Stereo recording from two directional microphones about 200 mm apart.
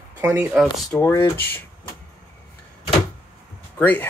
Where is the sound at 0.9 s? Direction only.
15° left (ahead or behind).